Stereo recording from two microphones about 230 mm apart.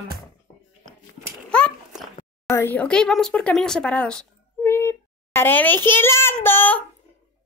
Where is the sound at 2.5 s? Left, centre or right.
Centre.